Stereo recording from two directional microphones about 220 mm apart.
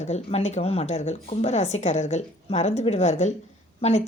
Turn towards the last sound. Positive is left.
turn(degrees=30)  # may be behind; listen again after turning